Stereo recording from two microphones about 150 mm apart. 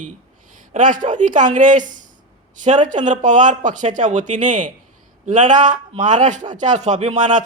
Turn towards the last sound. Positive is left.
turn(degrees=-55)  # may be behind; listen again after turning